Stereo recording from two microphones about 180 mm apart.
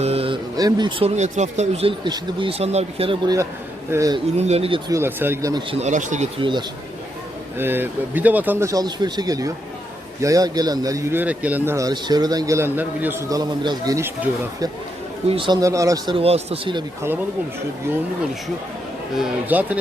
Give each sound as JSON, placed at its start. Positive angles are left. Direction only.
{"t": 0.0, "sound": "a sound", "side_deg": -35}
{"t": 0.5, "sound": "speech", "side_deg": -20}
{"t": 3.9, "sound": "speech", "side_deg": -20}
{"t": 4.4, "sound": "speech", "side_deg": -35}
{"t": 4.9, "sound": "a man's voice", "side_deg": -15}
{"t": 5.8, "sound": "speech", "side_deg": -45}
{"t": 6.4, "sound": "speech", "side_deg": -25}
{"t": 7.6, "sound": "a man's voice", "side_deg": -10}
{"t": 15.3, "sound": "speech", "side_deg": -25}
{"t": 16.1, "sound": "speech", "side_deg": -35}
{"t": 19.1, "sound": "a man's voice", "side_deg": -5}